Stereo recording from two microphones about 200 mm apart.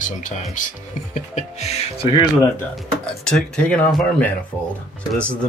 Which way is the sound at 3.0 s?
5° left (ahead or behind).